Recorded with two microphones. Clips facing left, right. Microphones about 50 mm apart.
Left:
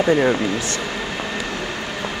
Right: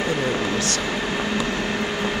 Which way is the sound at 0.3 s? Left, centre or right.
Left.